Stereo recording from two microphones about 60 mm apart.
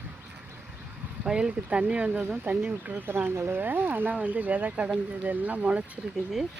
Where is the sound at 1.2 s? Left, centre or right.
Centre.